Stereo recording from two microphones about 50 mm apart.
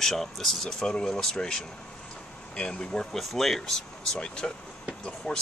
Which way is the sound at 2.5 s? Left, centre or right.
Centre.